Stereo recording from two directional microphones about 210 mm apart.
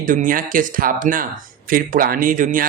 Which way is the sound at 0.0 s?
40° right (ahead or behind).